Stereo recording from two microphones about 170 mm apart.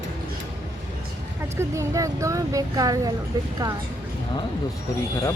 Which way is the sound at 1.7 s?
15° right (ahead or behind).